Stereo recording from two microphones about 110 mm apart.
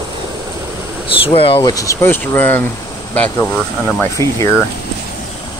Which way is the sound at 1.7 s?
30° left (ahead or behind).